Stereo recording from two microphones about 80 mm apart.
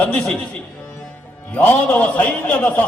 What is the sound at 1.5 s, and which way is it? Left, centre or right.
A man's voice, centre.